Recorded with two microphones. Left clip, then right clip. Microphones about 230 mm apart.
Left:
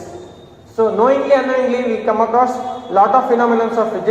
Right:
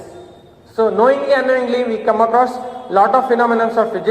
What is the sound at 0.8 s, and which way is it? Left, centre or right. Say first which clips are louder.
A man's voice: even; right.